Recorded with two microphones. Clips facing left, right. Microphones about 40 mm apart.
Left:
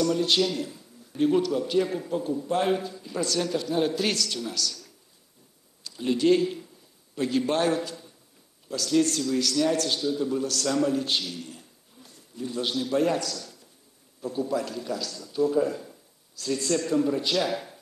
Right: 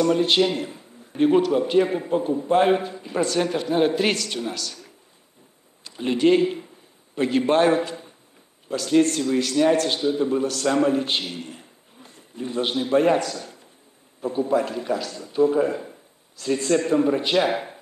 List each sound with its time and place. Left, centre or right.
0.0 s a man's voice: right